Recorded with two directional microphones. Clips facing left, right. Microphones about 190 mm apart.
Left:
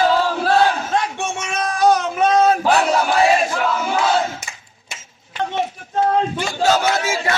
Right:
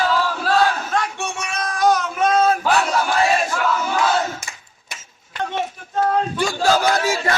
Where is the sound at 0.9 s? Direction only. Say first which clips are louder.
Left 2 dB; 25° left (ahead or behind).